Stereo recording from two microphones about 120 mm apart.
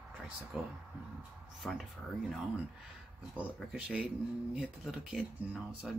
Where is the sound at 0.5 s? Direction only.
10° right (ahead or behind).